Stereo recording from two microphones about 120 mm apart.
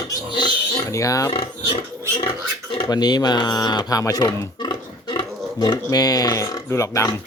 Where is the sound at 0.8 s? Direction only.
25° left (ahead or behind).